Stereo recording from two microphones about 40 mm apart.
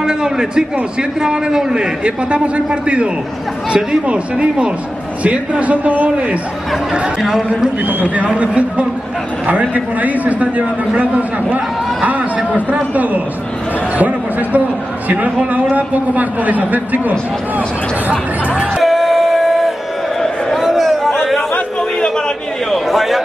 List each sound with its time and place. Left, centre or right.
0.0 s a man's voice: centre
4.1 s a man's voice: right
7.2 s a man's voice: centre
8.4 s a man's voice: right
13.9 s chatter: right
15.0 s a man's voice: right
18.8 s a sound: centre
21.1 s chatter: centre
22.7 s a man's voice: centre